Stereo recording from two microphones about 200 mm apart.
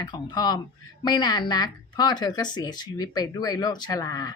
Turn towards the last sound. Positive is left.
turn(degrees=20)  # may be behind; listen again after turning